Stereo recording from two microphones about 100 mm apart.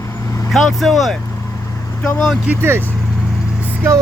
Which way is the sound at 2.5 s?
25° right (ahead or behind).